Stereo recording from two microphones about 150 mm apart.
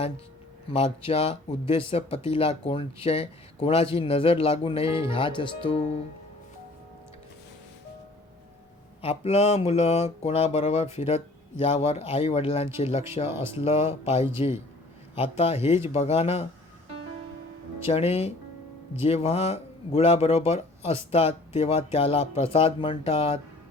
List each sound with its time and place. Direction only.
0.7 s speech: 40° left (ahead or behind)
9.0 s speech: 45° left (ahead or behind)
13.2 s speech: 15° right (ahead or behind)
13.5 s speech: 40° left (ahead or behind)
17.8 s speech: 45° left (ahead or behind)